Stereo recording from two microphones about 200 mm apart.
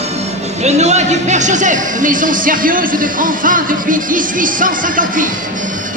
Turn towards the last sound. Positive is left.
turn(degrees=-40)  # may be behind; listen again after turning